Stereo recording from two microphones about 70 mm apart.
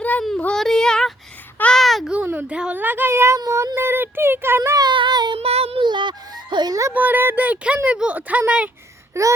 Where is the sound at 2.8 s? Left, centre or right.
Right.